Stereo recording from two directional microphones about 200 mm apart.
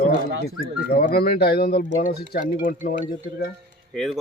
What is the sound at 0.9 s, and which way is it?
Speech, 45° left (ahead or behind).